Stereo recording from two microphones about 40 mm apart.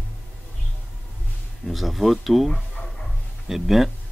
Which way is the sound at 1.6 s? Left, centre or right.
Centre.